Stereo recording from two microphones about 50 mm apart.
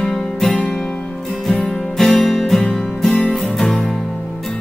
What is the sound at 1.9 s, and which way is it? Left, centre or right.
Music, centre.